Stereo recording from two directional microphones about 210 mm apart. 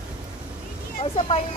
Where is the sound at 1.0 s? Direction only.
25° left (ahead or behind).